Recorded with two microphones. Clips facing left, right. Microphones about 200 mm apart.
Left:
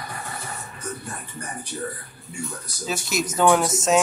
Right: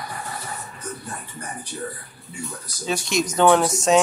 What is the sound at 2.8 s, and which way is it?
Speech, 5° left (ahead or behind).